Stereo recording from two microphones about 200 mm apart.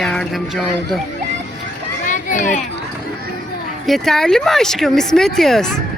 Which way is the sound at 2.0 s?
40° left (ahead or behind).